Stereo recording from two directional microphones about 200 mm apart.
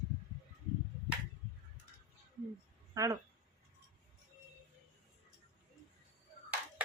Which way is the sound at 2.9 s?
15° right (ahead or behind).